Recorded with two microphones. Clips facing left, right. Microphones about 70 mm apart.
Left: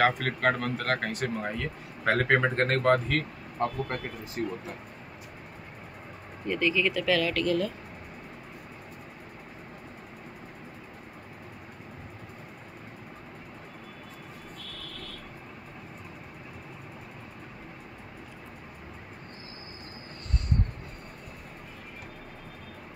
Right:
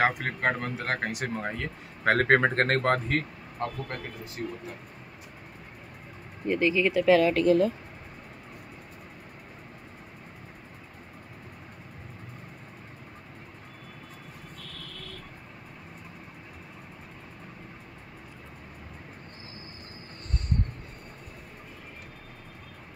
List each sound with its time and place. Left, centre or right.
0.2 s speech: centre
1.3 s speech: right
3.5 s speech: centre
6.4 s speech: right